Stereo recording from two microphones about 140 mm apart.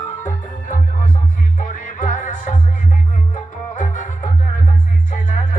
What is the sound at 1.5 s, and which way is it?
Music, 65° left (ahead or behind).